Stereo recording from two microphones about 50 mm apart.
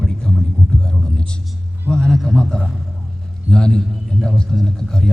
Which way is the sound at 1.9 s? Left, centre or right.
Centre.